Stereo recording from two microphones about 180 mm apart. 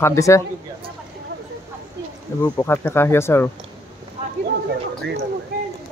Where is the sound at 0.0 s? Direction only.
15° left (ahead or behind).